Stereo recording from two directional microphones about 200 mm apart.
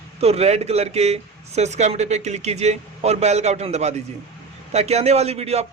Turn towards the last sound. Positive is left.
turn(degrees=-30)  # may be behind; listen again after turning